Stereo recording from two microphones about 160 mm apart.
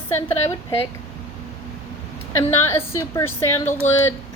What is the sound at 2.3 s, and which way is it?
A woman's voice, 15° left (ahead or behind).